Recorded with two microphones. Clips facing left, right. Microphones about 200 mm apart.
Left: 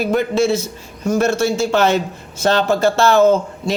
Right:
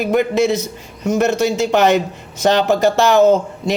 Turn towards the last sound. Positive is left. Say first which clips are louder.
# right 1 dB
turn(degrees=-15)  # may be behind; listen again after turning